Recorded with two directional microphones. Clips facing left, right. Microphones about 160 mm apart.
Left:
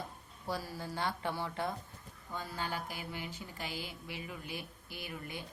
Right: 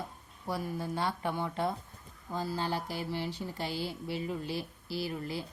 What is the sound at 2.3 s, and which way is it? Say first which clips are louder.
A woman's voice: right 6 dB; 35° right (ahead or behind).